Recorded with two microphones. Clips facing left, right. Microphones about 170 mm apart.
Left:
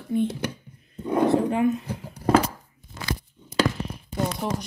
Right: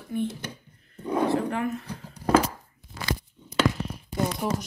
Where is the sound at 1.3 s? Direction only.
20° left (ahead or behind).